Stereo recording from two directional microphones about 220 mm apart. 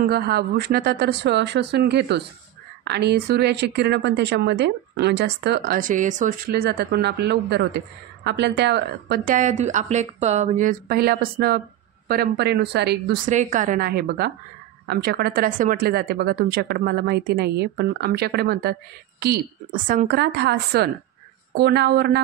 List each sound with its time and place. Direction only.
0.0 s a woman's voice: 45° right (ahead or behind)